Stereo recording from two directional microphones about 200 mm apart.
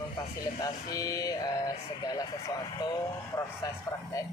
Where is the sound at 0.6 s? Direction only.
20° left (ahead or behind).